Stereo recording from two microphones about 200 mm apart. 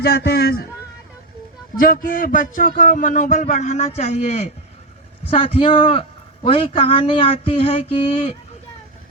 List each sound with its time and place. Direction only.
0.0 s a man's voice: 55° left (ahead or behind)
1.8 s a man's voice: 45° left (ahead or behind); by 8.3 s 30° left (ahead or behind)